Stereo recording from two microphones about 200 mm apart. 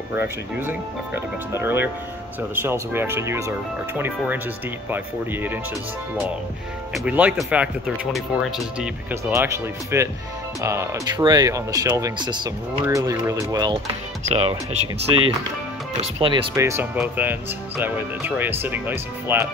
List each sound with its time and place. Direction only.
0.1 s speech: 10° right (ahead or behind)
6.9 s speech: 5° right (ahead or behind)
14.3 s speech: 30° right (ahead or behind)
16.0 s speech: 25° right (ahead or behind)
16.5 s speech: 15° right (ahead or behind)